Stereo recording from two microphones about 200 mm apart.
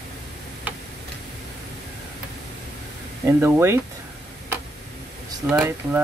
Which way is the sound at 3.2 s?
10° right (ahead or behind).